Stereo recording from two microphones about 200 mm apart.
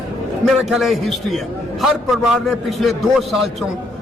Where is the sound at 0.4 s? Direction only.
Centre (ahead or behind).